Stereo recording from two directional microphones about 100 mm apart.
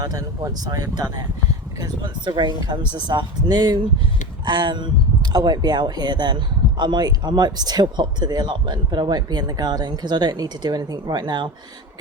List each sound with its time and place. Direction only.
0.0 s speech: 35° right (ahead or behind)